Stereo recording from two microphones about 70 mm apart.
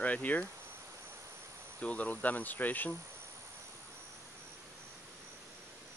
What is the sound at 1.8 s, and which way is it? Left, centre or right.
Speech, centre.